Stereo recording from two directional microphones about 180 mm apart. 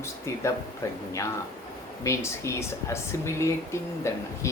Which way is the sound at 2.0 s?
15° left (ahead or behind).